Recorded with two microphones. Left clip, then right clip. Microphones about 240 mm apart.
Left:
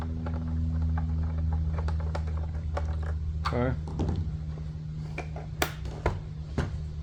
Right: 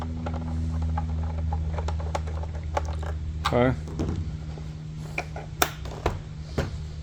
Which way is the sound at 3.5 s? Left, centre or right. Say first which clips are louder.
Right 8 dB; right.